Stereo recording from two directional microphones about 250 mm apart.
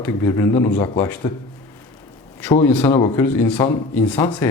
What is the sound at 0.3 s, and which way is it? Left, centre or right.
A man's voice, centre.